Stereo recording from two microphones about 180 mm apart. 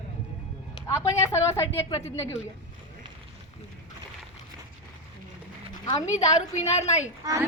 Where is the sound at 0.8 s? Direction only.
15° left (ahead or behind).